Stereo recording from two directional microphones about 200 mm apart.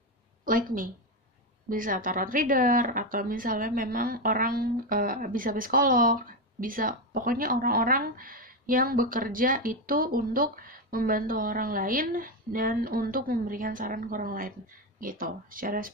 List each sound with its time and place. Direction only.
0.5 s a woman's voice: 45° right (ahead or behind)